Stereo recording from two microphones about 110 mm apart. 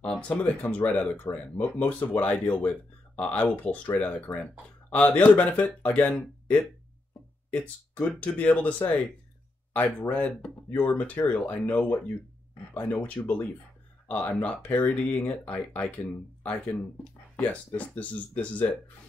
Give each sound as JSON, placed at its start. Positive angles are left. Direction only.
{"t": 0.0, "sound": "speech", "side_deg": 10}